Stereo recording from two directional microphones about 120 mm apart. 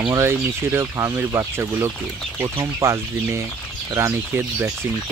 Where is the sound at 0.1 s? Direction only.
20° right (ahead or behind).